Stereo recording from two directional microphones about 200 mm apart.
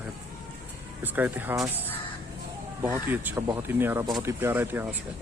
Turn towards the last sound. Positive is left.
turn(degrees=-10)  # may be behind; listen again after turning